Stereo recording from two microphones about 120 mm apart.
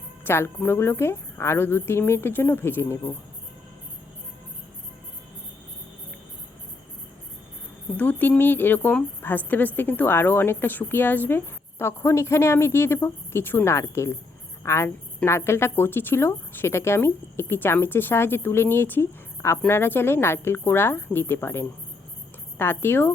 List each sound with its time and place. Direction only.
0.3 s a woman's voice: 20° left (ahead or behind)
7.9 s a woman's voice: 15° left (ahead or behind)